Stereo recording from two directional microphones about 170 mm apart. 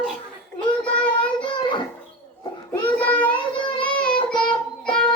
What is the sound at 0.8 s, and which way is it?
Child singing, 5° left (ahead or behind).